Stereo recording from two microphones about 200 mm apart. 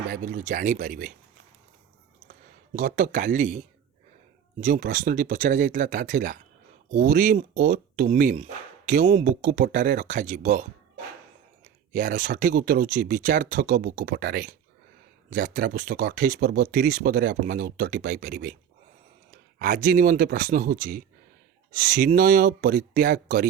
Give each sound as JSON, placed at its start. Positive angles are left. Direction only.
{"t": 0.1, "sound": "speech", "side_deg": -40}
{"t": 2.7, "sound": "speech", "side_deg": -40}
{"t": 4.6, "sound": "speech", "side_deg": -40}
{"t": 11.9, "sound": "speech", "side_deg": -40}
{"t": 19.5, "sound": "speech", "side_deg": -40}